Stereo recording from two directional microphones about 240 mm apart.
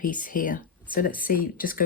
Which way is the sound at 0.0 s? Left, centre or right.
Left.